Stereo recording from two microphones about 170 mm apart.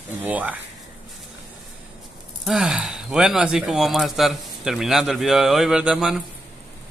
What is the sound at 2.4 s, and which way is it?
A man's voice, centre (ahead or behind).